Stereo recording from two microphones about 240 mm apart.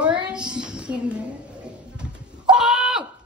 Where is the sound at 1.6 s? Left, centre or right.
Centre.